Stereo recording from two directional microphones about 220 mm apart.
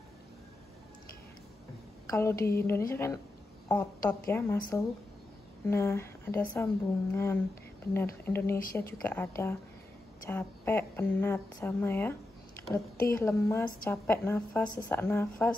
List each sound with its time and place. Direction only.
2.0 s a woman's voice: 15° left (ahead or behind)